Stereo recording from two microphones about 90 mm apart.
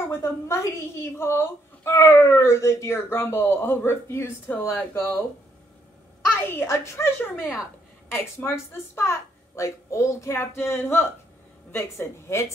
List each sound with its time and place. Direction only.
0.1 s a woman's voice: 30° left (ahead or behind)
6.4 s a woman's voice: 25° left (ahead or behind)
7.3 s speech: 5° right (ahead or behind)
8.1 s a woman's voice: 25° left (ahead or behind)